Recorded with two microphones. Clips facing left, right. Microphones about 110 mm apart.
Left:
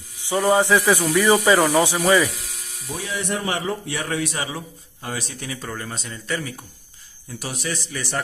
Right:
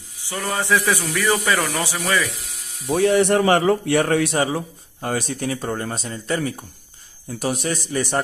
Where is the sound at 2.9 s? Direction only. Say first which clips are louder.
Right 11 dB; 65° right (ahead or behind); by 6.5 s 35° right (ahead or behind).